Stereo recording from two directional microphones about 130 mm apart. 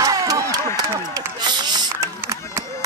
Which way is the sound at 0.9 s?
20° right (ahead or behind).